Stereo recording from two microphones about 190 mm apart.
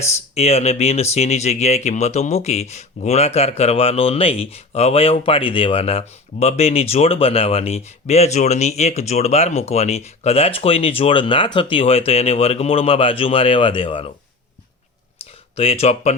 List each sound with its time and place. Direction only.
0.3 s speech: 35° left (ahead or behind)
15.2 s clicking: 30° left (ahead or behind)
15.5 s speech: 30° left (ahead or behind)